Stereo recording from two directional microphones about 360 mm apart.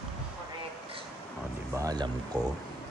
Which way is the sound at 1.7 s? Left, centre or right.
Centre.